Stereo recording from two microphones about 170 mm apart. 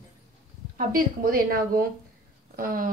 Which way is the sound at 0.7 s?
55° right (ahead or behind).